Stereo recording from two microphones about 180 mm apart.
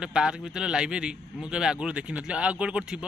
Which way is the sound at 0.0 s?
5° right (ahead or behind).